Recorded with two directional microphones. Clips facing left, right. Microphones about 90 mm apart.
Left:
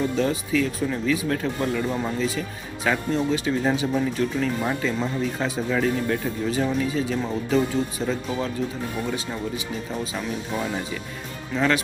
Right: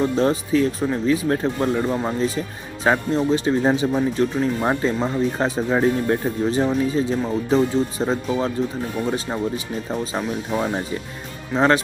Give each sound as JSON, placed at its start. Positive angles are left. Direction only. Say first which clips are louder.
{"t": 0.0, "sound": "speech", "louder": "right 4 dB", "side_deg": -40}